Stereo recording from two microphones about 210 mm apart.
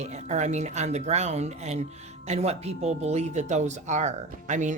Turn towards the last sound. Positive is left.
turn(degrees=-35)  # may be behind; listen again after turning